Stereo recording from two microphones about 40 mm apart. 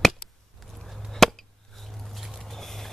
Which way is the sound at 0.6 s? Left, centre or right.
Centre.